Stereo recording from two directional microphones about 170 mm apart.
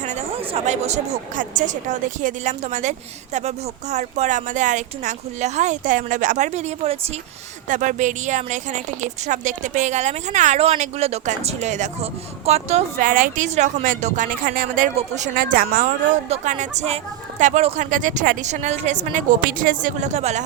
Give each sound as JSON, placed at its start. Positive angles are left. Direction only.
{"t": 0.0, "sound": "a woman's voice", "side_deg": -40}
{"t": 7.7, "sound": "a woman's voice", "side_deg": -45}
{"t": 14.9, "sound": "a woman's voice", "side_deg": -45}
{"t": 16.3, "sound": "a woman's voice", "side_deg": -45}